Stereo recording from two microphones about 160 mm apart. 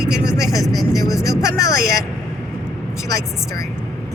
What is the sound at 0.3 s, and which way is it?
Vehicle, 20° left (ahead or behind).